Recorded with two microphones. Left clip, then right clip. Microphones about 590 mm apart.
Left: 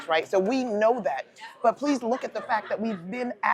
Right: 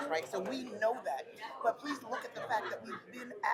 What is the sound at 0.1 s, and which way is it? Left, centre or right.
Speech, left.